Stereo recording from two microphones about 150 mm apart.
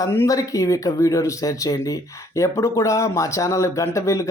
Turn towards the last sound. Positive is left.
turn(degrees=20)  # may be behind; listen again after turning